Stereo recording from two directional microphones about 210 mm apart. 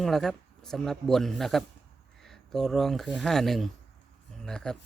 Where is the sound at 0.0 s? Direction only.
Centre (ahead or behind).